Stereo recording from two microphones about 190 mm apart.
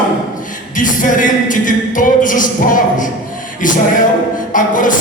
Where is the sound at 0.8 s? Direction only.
45° left (ahead or behind).